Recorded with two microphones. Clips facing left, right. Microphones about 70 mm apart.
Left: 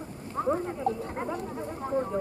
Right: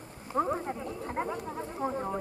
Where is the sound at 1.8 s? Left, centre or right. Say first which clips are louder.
Left 4 dB; centre.